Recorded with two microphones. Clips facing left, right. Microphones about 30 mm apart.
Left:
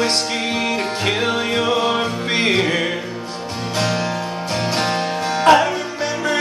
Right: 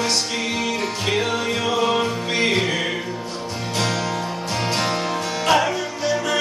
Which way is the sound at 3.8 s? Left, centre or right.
Left.